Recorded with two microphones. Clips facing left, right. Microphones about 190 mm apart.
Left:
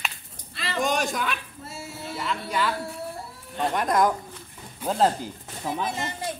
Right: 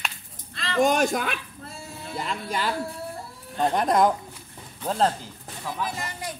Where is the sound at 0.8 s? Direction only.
50° right (ahead or behind).